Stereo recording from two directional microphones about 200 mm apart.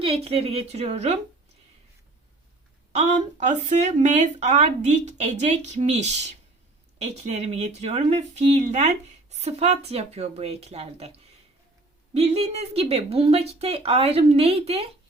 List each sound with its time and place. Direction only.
0.0 s speech: 30° right (ahead or behind)
2.9 s speech: 35° right (ahead or behind)